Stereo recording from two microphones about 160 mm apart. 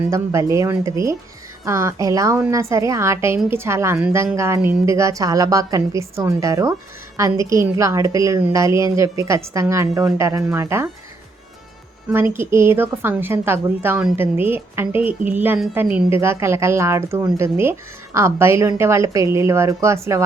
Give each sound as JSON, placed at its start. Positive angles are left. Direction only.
{"t": 0.1, "sound": "a woman's voice", "side_deg": -20}
{"t": 12.0, "sound": "a woman's voice", "side_deg": -15}